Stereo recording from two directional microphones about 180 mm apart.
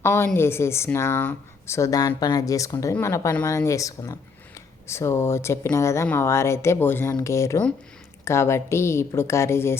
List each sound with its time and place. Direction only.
0.0 s a woman's voice: 15° left (ahead or behind)